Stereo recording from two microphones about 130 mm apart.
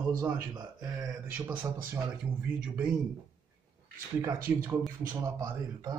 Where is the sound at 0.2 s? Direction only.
30° right (ahead or behind).